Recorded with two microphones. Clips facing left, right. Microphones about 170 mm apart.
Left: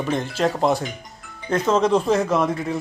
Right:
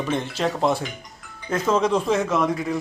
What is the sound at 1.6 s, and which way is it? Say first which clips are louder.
Speech: left 2 dB; 30° left (ahead or behind).